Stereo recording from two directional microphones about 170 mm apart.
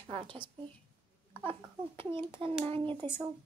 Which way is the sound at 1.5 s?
30° right (ahead or behind).